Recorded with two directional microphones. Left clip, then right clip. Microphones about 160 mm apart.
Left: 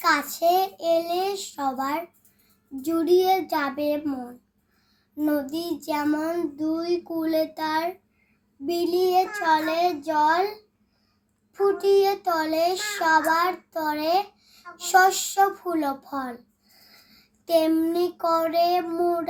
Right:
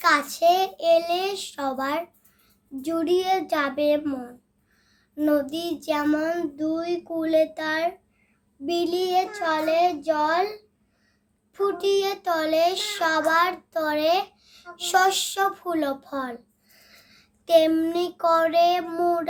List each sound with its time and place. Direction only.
0.0 s a child's voice: 15° right (ahead or behind)
11.5 s a child's voice: 15° right (ahead or behind)
17.4 s a child's voice: 15° right (ahead or behind)